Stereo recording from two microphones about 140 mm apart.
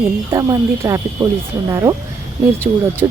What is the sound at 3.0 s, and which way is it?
Speech, 25° right (ahead or behind).